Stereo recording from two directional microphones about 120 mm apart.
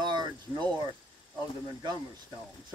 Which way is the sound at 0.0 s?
40° right (ahead or behind).